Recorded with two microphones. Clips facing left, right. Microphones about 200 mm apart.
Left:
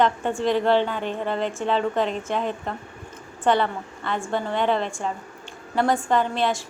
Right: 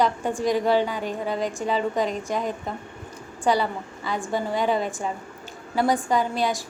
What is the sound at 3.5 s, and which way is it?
A woman's voice, 5° right (ahead or behind).